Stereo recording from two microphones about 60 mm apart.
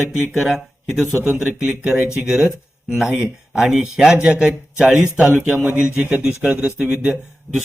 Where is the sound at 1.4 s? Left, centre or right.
Centre.